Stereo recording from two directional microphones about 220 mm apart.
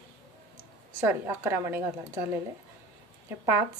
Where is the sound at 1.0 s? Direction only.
10° right (ahead or behind).